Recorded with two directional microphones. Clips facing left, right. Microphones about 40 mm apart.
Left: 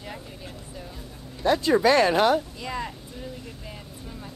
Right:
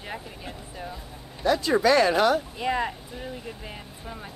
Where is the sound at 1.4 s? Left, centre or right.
Left.